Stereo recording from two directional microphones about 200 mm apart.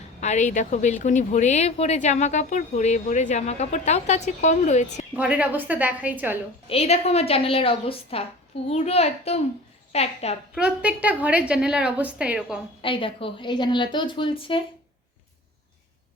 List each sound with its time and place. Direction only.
0.2 s speech: 35° left (ahead or behind)
5.1 s a woman's voice: 5° right (ahead or behind)
6.7 s a woman's voice: 30° left (ahead or behind)
10.5 s a woman's voice: 5° right (ahead or behind)
12.8 s a woman's voice: 25° left (ahead or behind)